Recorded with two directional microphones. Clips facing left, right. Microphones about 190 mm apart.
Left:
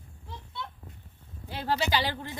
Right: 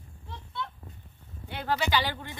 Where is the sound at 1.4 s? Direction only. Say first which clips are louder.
Even; 35° left (ahead or behind).